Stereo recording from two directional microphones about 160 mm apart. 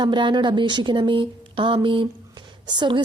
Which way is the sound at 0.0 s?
30° right (ahead or behind).